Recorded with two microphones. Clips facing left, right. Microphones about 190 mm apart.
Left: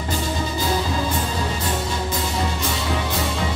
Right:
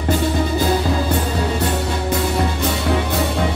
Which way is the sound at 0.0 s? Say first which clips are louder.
Right 7 dB; 60° right (ahead or behind).